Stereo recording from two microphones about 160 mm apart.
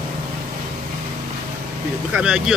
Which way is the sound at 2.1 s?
5° right (ahead or behind).